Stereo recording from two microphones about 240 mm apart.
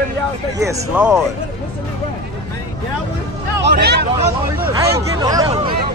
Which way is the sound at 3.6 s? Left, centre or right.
Right.